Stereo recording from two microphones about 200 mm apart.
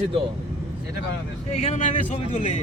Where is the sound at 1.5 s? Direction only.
35° left (ahead or behind).